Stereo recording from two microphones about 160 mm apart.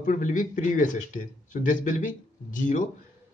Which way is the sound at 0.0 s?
50° left (ahead or behind).